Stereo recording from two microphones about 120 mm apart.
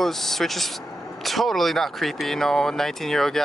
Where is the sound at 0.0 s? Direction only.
Centre (ahead or behind).